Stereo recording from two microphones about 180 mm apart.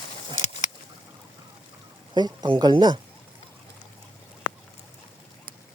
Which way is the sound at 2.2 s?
25° right (ahead or behind).